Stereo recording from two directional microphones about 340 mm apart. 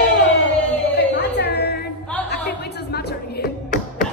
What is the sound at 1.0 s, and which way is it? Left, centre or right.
Music, left.